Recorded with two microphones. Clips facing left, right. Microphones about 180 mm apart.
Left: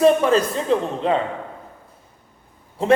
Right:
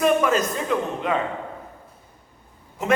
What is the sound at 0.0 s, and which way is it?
A man's voice, 30° left (ahead or behind).